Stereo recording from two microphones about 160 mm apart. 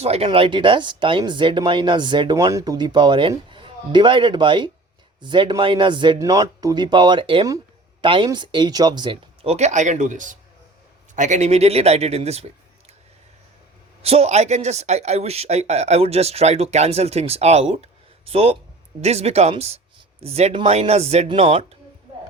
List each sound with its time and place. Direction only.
0.0 s speech: 40° right (ahead or behind)
14.0 s speech: 40° right (ahead or behind)